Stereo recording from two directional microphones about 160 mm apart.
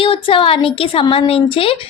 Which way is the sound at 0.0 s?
35° left (ahead or behind).